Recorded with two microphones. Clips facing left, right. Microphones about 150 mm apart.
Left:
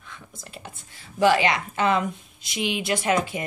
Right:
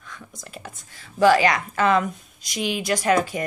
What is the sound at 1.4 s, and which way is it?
Speech, 25° left (ahead or behind).